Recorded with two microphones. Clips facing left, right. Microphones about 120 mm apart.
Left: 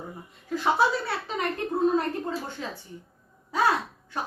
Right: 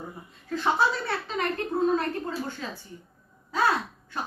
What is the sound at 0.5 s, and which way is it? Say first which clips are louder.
Speech: left 1 dB; 10° left (ahead or behind).